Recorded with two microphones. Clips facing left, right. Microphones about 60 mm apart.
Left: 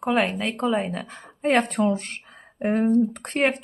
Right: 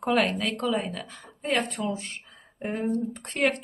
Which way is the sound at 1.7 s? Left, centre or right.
Left.